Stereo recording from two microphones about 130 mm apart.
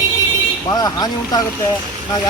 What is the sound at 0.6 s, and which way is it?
Speech, 30° left (ahead or behind).